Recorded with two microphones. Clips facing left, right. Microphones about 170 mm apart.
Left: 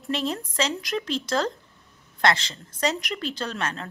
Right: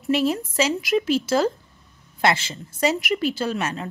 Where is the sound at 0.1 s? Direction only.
5° right (ahead or behind).